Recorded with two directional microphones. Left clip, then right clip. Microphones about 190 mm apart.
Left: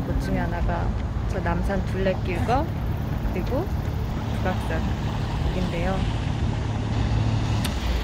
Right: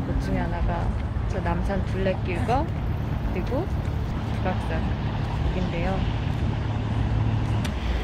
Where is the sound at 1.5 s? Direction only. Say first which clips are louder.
Left 1 dB; centre (ahead or behind).